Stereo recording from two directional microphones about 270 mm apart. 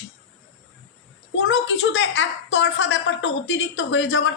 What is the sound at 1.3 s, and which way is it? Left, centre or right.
A woman's voice, left.